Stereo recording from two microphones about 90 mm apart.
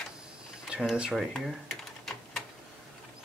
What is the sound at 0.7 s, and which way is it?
Speech, 10° right (ahead or behind).